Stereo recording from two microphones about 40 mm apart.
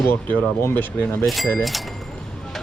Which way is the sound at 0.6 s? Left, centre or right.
Left.